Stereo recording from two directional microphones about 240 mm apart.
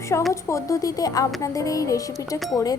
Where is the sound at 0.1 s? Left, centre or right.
Centre.